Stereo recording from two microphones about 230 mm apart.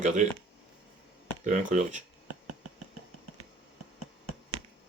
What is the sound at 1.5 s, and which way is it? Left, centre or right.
Speech, right.